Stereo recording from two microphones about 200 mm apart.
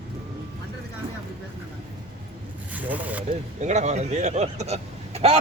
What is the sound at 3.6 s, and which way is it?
A man's voice, 35° right (ahead or behind).